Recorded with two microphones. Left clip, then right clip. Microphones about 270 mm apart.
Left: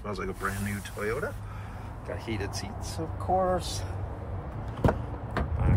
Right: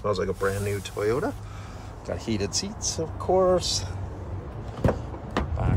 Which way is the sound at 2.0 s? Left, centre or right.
Centre.